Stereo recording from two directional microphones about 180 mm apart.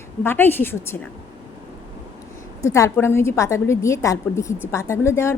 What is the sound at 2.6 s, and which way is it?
A woman's voice, 15° left (ahead or behind).